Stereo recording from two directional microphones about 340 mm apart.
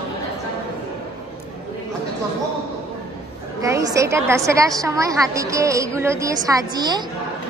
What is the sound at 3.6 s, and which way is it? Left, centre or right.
A woman's voice, centre.